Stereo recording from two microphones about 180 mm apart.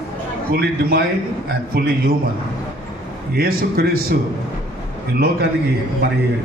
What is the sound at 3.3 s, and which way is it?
Speech, 55° right (ahead or behind).